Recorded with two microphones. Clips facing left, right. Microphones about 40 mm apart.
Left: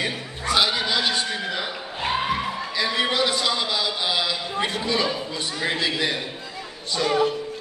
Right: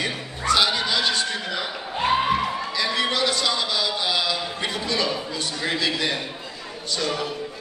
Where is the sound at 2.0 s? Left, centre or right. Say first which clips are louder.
Right 4 dB; centre.